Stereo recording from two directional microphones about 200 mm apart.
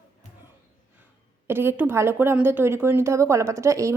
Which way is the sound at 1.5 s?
10° right (ahead or behind).